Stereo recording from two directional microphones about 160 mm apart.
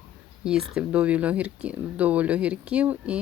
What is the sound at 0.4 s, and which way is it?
Speech, 5° right (ahead or behind).